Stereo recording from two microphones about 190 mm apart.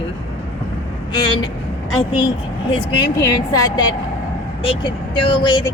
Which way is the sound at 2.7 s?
25° left (ahead or behind).